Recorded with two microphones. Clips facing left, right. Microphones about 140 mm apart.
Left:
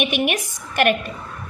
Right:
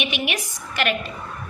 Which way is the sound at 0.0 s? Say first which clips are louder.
Left 5 dB; 50° left (ahead or behind).